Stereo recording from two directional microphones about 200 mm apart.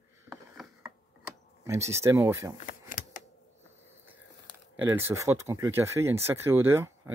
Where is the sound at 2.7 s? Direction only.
40° left (ahead or behind).